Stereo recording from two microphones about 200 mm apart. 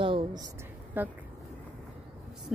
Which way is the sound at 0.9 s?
10° right (ahead or behind).